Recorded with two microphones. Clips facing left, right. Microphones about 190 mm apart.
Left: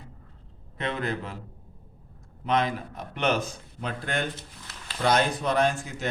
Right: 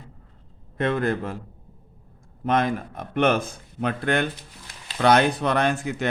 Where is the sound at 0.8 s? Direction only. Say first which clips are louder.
Right 7 dB; 50° right (ahead or behind).